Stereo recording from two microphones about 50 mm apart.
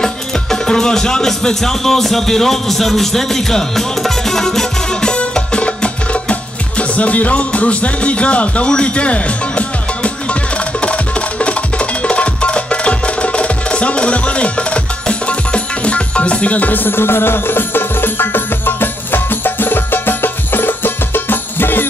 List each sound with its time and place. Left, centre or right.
0.0 s music: centre; by 21.8 s left